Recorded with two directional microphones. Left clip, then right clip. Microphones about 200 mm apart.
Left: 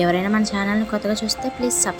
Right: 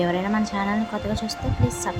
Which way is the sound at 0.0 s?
15° left (ahead or behind).